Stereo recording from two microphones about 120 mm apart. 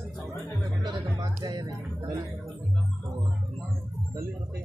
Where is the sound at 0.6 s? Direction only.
30° right (ahead or behind).